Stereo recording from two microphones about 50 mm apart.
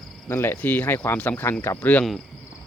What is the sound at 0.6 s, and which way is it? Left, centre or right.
Speech, left.